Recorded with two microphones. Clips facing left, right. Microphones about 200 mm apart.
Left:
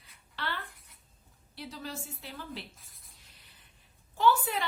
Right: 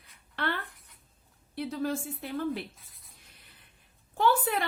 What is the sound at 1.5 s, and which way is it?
A woman's voice, 55° right (ahead or behind).